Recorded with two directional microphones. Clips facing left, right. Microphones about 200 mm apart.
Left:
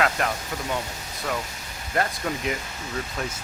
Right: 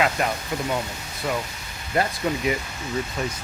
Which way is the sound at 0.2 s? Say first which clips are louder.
Right 2 dB; 5° right (ahead or behind).